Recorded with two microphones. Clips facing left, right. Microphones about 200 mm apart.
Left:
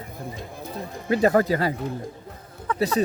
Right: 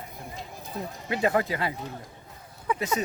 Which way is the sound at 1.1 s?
40° left (ahead or behind).